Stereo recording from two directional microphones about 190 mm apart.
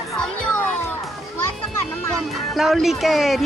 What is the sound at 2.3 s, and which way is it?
Speech, centre (ahead or behind).